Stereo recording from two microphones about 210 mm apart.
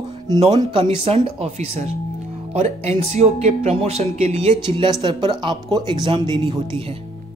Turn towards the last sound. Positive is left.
turn(degrees=-20)  # may be behind; listen again after turning